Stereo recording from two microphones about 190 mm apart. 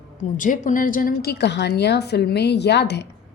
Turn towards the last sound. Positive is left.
turn(degrees=60)  # may be behind; listen again after turning